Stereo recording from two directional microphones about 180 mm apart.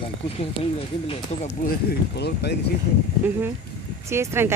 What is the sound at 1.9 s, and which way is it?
Speech, 65° left (ahead or behind).